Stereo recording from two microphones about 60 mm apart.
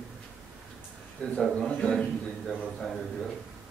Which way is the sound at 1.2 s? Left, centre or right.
Centre.